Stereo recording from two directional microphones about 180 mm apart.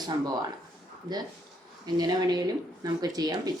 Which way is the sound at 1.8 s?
20° right (ahead or behind).